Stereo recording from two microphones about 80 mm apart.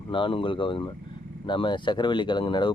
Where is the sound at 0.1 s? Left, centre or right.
Left.